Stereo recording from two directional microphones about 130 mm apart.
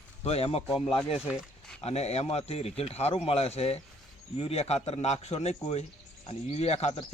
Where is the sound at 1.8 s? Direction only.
55° left (ahead or behind).